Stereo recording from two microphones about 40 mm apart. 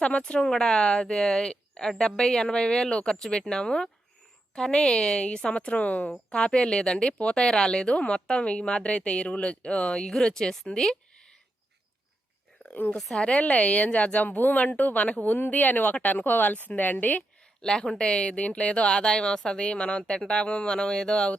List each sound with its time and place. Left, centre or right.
0.2 s speech: left
6.1 s speech: left
10.8 s a sound: centre
12.6 s a sound: left
13.1 s a woman's voice: left
14.3 s a woman's voice: left
17.6 s speech: centre